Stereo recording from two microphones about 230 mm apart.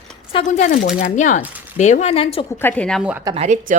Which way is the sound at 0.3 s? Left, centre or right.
Left.